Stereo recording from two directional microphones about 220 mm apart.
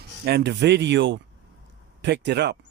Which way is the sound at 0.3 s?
50° right (ahead or behind).